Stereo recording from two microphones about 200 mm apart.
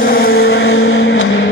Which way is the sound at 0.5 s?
90° left.